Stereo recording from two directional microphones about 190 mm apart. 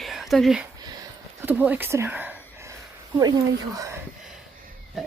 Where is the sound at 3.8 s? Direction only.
15° right (ahead or behind).